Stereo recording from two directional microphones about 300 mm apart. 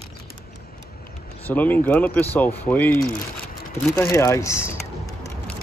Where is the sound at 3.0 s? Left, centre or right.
Left.